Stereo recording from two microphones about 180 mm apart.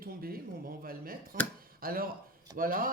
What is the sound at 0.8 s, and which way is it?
Speech, 55° right (ahead or behind).